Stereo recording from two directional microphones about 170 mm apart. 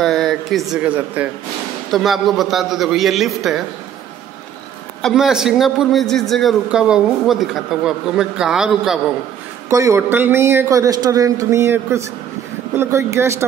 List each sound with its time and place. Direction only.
0.0 s a man's voice: centre (ahead or behind)
5.0 s a man's voice: 5° right (ahead or behind)
9.7 s a man's voice: 20° right (ahead or behind)